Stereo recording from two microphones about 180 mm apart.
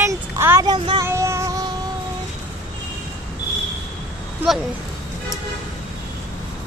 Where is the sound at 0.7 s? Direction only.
30° right (ahead or behind).